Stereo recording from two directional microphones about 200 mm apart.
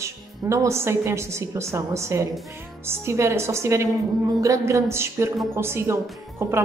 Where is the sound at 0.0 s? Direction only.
15° right (ahead or behind).